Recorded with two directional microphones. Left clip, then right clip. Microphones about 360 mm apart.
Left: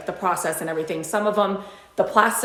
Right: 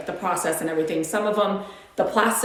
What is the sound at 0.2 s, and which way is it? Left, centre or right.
A woman's voice, centre.